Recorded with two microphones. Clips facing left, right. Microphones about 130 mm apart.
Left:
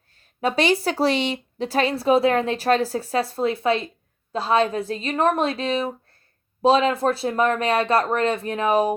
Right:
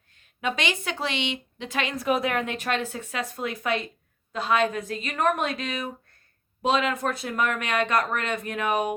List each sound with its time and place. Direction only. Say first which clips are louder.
0.2 s speech: left 7 dB; 35° left (ahead or behind)